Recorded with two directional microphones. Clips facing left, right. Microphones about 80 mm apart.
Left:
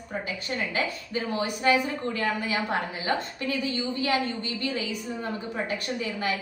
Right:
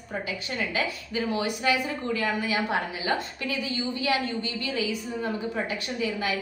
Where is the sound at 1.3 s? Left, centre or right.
Left.